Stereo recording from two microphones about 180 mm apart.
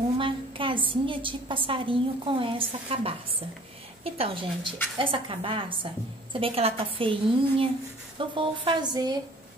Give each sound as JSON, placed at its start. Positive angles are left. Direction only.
{"t": 0.2, "sound": "a woman's voice", "side_deg": -30}